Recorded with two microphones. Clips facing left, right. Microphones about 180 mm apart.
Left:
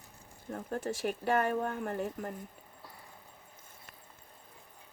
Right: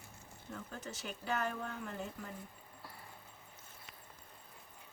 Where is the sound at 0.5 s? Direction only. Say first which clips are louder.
Left 10 dB; 60° left (ahead or behind).